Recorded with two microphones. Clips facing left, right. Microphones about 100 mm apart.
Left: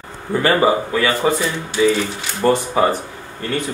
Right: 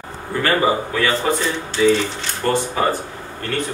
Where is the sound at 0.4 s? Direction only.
15° left (ahead or behind).